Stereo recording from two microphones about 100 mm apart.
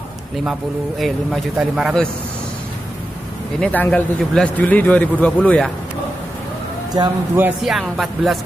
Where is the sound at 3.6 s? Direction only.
15° left (ahead or behind).